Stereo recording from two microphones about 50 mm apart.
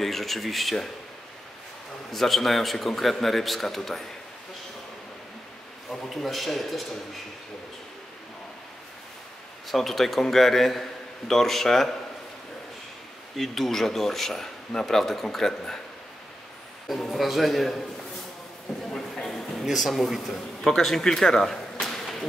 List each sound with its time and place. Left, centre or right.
0.0 s a man's voice: centre
2.1 s a man's voice: centre
6.0 s a man's voice: centre
9.7 s a man's voice: centre
13.4 s speech: centre
17.0 s a man's voice: centre
19.1 s a sound: centre
19.6 s a man's voice: centre
21.8 s whip: centre